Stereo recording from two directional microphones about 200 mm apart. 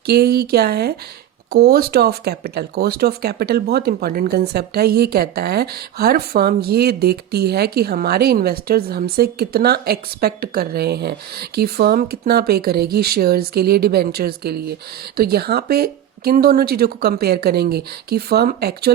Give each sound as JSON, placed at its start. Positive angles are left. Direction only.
{"t": 0.0, "sound": "speech", "side_deg": -50}